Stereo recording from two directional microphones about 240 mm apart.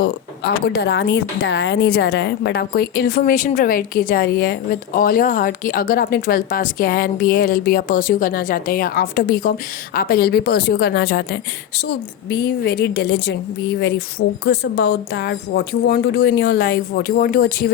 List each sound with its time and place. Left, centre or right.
0.7 s a woman's voice: left
14.4 s a woman's voice: left